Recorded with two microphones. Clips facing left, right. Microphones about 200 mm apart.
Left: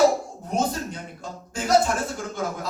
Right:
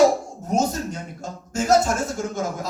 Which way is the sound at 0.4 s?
45° right (ahead or behind).